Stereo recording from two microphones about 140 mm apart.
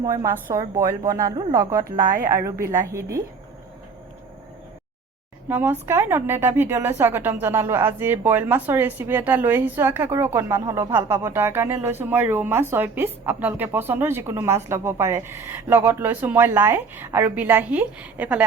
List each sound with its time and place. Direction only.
0.0 s a woman's voice: 25° right (ahead or behind)
2.0 s a woman's voice: 80° right
2.3 s a woman's voice: 20° right (ahead or behind)
5.5 s a woman's voice: 15° right (ahead or behind)